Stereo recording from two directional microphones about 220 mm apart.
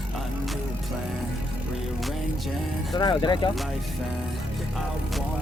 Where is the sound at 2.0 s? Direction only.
Centre (ahead or behind).